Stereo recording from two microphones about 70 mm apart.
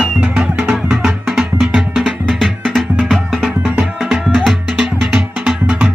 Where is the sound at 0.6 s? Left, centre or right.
Centre.